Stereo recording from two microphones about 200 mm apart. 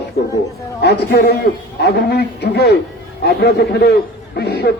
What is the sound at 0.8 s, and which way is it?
A man's voice, 55° left (ahead or behind).